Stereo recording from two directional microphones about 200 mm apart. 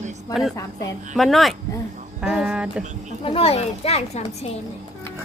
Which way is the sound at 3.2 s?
30° left (ahead or behind).